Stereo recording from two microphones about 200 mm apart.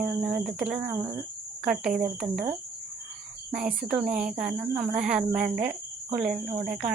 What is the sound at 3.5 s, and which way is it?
Speech, 5° right (ahead or behind).